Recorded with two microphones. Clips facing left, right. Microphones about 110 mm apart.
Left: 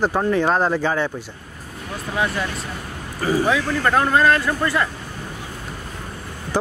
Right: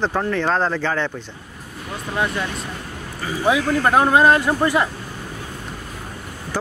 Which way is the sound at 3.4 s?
15° right (ahead or behind).